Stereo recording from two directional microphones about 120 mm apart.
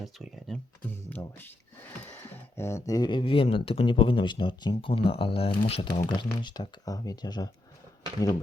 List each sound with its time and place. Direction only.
0.0 s speech: centre (ahead or behind)
0.9 s speech: 15° left (ahead or behind); by 5.9 s 50° left (ahead or behind)
5.9 s speech: 35° left (ahead or behind)